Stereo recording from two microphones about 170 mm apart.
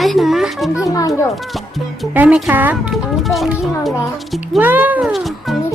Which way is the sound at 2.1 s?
10° right (ahead or behind).